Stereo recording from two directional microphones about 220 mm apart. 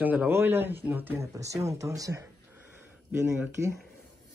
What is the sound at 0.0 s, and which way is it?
Speech, 5° right (ahead or behind).